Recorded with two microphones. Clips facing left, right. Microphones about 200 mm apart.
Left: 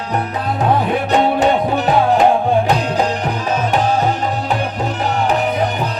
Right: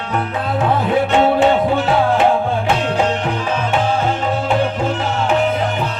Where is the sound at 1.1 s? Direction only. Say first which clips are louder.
Even; 40° left (ahead or behind).